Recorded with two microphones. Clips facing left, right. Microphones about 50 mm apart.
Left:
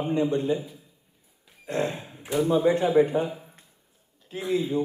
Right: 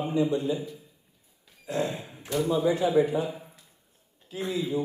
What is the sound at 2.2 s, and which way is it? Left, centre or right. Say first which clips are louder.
Speech: left 3 dB; centre.